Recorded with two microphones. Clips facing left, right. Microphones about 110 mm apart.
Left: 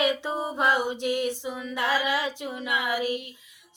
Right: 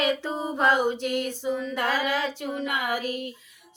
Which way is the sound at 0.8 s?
50° right (ahead or behind).